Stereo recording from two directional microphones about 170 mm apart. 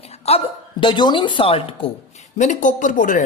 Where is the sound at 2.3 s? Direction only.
45° left (ahead or behind).